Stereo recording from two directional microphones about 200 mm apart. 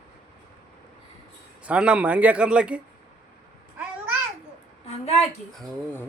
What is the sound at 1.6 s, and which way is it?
Speech, 5° right (ahead or behind).